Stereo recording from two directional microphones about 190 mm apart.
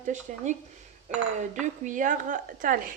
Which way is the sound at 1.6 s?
40° right (ahead or behind).